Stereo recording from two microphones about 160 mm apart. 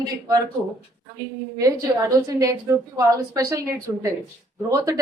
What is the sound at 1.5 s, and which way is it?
Speech, 20° right (ahead or behind).